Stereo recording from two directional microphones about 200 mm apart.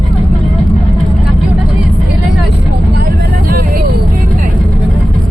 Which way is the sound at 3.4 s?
45° right (ahead or behind).